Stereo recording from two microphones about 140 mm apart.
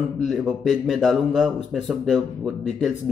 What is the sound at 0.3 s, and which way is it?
Speech, centre (ahead or behind).